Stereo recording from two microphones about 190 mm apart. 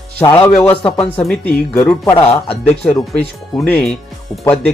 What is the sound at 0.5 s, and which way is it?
Speech, 5° left (ahead or behind).